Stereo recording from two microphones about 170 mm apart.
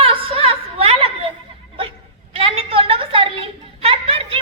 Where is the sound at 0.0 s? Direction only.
35° right (ahead or behind).